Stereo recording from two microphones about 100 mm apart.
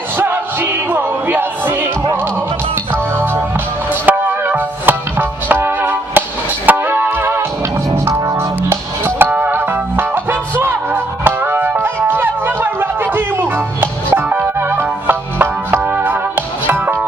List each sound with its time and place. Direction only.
0.2 s music: 20° right (ahead or behind)
2.9 s music: 25° right (ahead or behind)